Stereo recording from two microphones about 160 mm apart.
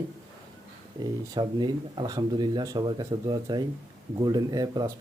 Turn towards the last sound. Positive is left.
turn(degrees=-25)  # may be behind; listen again after turning